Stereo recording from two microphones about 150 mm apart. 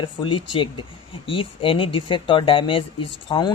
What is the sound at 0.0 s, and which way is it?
Speech, 35° left (ahead or behind).